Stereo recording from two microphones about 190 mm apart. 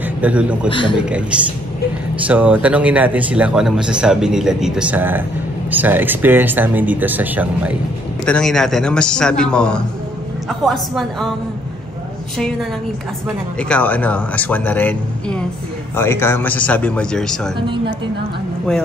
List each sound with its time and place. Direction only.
0.2 s speech: 5° right (ahead or behind)
0.7 s a man's voice: 25° left (ahead or behind)
0.9 s a man's voice: 5° right (ahead or behind)
2.2 s speech: 5° right (ahead or behind)
8.3 s a man's voice: 5° left (ahead or behind)
12.4 s a man's voice: 5° left (ahead or behind)
17.6 s a woman's voice: 25° right (ahead or behind)